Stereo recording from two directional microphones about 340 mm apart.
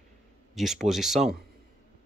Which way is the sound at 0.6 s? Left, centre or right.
Centre.